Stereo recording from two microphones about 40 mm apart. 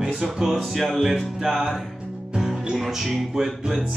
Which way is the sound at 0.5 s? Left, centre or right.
Centre.